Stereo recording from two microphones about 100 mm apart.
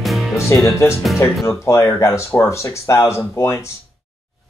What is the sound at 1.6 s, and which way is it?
Speech, 30° left (ahead or behind).